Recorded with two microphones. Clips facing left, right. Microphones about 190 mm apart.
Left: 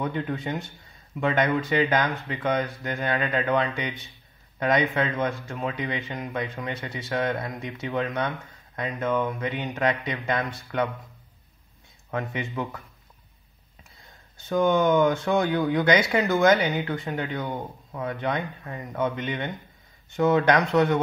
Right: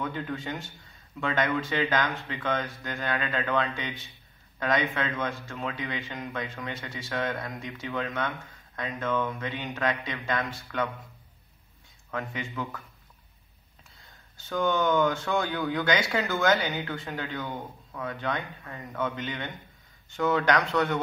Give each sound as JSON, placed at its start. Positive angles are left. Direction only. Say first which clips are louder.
{"t": 0.3, "sound": "a man's voice", "louder": "left 4 dB", "side_deg": 20}
{"t": 12.1, "sound": "speech", "louder": "left 4 dB", "side_deg": 20}
{"t": 14.5, "sound": "speech", "louder": "left 5 dB", "side_deg": 20}